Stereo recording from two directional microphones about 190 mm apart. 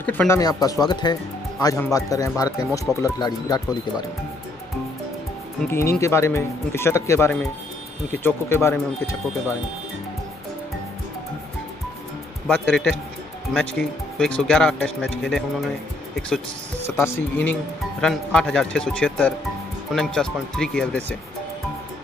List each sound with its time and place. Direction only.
0.0 s speech: 10° left (ahead or behind)
0.4 s speech: 20° left (ahead or behind)
5.7 s speech: 15° left (ahead or behind)
12.4 s speech: 5° left (ahead or behind)
16.8 s speech: 15° left (ahead or behind)